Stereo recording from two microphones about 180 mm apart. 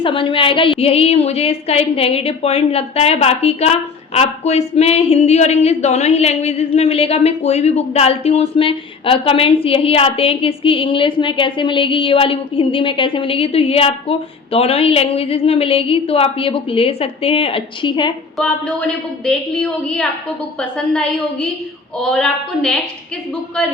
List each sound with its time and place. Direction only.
0.0 s speech: 30° left (ahead or behind)
18.3 s a woman's voice: 5° left (ahead or behind)